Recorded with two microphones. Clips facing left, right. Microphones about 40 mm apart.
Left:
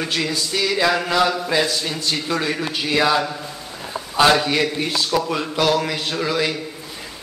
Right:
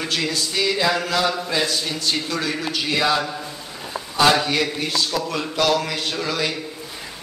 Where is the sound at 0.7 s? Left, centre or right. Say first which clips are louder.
Left 6 dB; centre.